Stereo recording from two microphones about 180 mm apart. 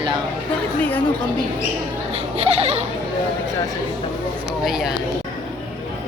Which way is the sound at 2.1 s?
35° right (ahead or behind).